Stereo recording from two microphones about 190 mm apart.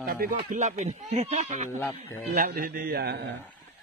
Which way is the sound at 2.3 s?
45° right (ahead or behind).